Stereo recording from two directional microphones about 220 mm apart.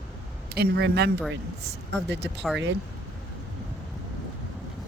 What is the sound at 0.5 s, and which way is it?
Speech, 45° right (ahead or behind).